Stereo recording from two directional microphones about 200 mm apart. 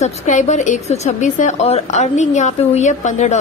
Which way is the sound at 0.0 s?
35° left (ahead or behind).